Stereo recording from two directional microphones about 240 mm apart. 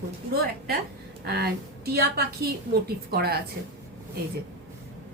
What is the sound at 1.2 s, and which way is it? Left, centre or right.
A woman's voice, right.